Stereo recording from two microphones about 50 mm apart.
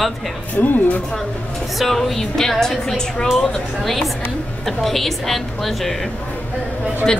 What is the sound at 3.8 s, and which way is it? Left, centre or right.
A woman's voice, centre.